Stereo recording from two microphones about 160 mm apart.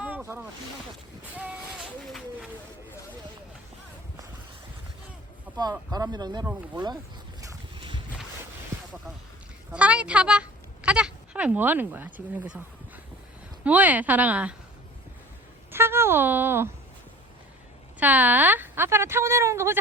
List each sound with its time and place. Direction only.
0.0 s boat: 15° right (ahead or behind)
5.5 s a sound: 10° right (ahead or behind)
5.9 s speech: 25° right (ahead or behind)
6.4 s a woman's voice: 10° right (ahead or behind)
7.8 s boat: 30° right (ahead or behind)
9.7 s a woman's voice: 10° right (ahead or behind)
13.7 s a woman's voice: 10° right (ahead or behind)
15.7 s a woman's voice: 15° right (ahead or behind)
18.0 s a woman's voice: 10° right (ahead or behind)